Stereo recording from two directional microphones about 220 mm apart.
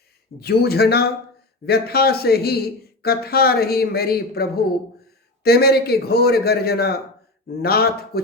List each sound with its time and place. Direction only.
0.3 s a man's voice: 45° left (ahead or behind)